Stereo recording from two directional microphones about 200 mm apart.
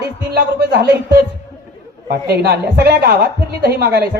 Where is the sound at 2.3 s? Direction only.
50° right (ahead or behind).